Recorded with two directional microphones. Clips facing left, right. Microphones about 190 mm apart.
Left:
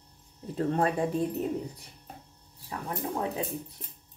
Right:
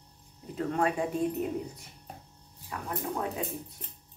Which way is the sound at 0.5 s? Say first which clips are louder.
Left 2 dB; 35° left (ahead or behind).